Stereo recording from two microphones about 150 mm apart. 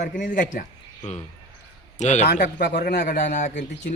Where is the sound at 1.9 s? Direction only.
50° left (ahead or behind).